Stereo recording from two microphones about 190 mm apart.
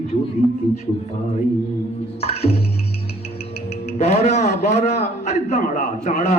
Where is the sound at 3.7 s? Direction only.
35° left (ahead or behind).